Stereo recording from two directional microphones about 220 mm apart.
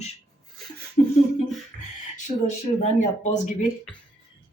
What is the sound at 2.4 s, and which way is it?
Speech, 30° left (ahead or behind).